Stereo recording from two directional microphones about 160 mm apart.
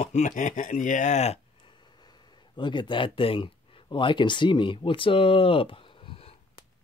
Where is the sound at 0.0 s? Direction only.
45° left (ahead or behind).